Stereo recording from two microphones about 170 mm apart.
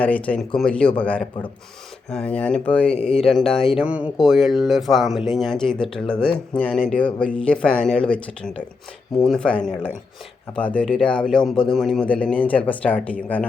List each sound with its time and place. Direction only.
0.0 s speech: 10° left (ahead or behind)
3.0 s speech: 35° left (ahead or behind)
3.8 s speech: 5° right (ahead or behind); by 13.4 s 10° left (ahead or behind)